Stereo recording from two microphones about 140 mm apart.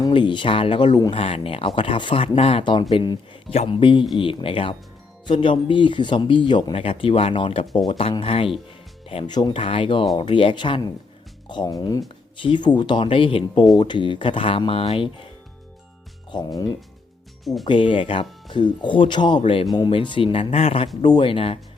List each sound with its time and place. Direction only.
0.0 s speech: 35° left (ahead or behind)
1.1 s speech: 40° left (ahead or behind)
16.3 s speech: 35° left (ahead or behind)
17.4 s speech: centre (ahead or behind)
17.7 s speech: 35° left (ahead or behind)